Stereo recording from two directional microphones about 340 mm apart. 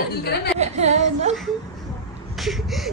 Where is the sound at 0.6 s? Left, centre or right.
Centre.